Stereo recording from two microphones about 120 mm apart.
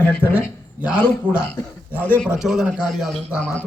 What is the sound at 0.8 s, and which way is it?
A man's voice, 10° right (ahead or behind).